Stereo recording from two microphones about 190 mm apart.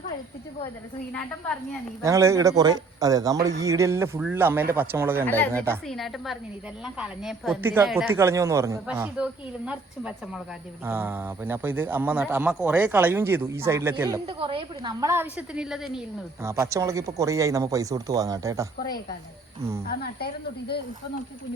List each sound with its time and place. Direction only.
2.0 s speech: 15° right (ahead or behind)
5.2 s a woman's voice: 10° left (ahead or behind); by 13.9 s 15° right (ahead or behind)
14.3 s speech: 30° right (ahead or behind)
15.0 s a woman's voice: 10° right (ahead or behind)
16.4 s speech: 15° right (ahead or behind)
19.9 s speech: 55° left (ahead or behind)